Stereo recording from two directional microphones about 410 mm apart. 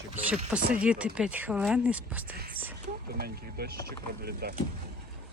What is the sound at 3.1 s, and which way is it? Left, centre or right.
Speech, right.